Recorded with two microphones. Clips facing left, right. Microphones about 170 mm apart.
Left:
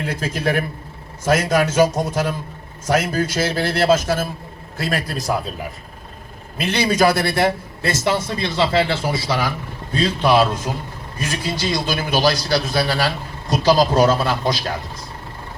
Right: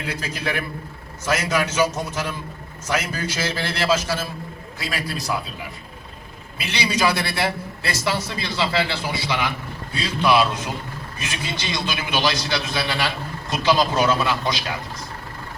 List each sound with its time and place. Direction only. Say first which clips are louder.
0.0 s a man's voice: left 5 dB; 45° left (ahead or behind)